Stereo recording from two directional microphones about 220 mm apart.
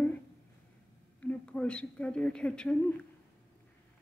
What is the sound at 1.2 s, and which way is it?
A woman's voice, 5° left (ahead or behind).